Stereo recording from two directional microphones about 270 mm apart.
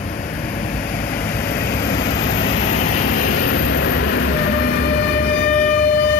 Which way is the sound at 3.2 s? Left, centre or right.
Left.